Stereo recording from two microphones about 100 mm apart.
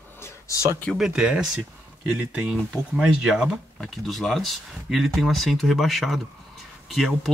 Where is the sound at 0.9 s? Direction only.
5° right (ahead or behind).